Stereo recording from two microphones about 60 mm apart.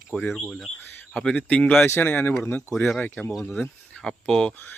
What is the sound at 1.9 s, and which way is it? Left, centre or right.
Speech, left.